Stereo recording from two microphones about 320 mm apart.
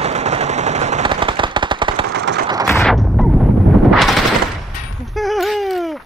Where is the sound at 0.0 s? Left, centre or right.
Centre.